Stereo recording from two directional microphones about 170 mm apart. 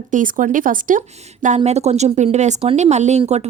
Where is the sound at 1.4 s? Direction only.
40° right (ahead or behind).